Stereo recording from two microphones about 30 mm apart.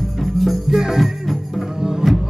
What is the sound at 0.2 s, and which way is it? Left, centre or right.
Music, centre.